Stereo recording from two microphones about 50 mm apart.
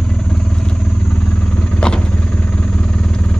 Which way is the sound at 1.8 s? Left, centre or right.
Centre.